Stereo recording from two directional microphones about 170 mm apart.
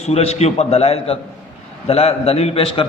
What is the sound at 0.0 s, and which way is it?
A man's voice, 40° left (ahead or behind).